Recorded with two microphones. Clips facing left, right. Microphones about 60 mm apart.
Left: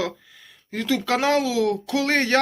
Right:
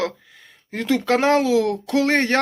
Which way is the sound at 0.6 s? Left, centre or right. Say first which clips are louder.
Right 3 dB; right.